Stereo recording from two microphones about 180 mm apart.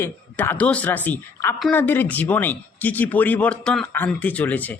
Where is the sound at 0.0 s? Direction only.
10° left (ahead or behind).